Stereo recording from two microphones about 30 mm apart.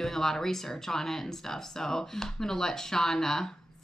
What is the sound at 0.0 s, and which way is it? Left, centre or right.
Speech, centre.